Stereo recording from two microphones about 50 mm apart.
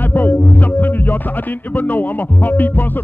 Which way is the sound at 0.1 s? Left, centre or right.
Left.